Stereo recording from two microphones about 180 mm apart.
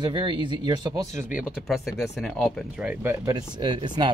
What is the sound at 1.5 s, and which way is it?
Speech, centre (ahead or behind).